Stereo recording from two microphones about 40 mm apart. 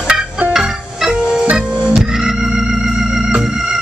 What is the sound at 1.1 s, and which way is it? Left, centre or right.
Music, right.